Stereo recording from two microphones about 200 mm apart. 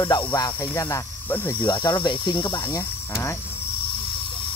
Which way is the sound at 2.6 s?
10° left (ahead or behind).